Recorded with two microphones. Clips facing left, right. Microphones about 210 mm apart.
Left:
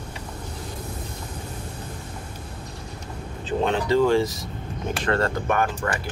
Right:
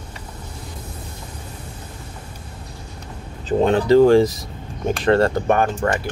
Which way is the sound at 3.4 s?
40° right (ahead or behind).